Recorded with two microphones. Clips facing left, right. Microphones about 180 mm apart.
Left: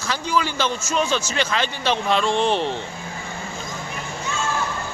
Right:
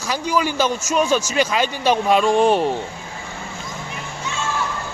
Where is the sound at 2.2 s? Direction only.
45° right (ahead or behind).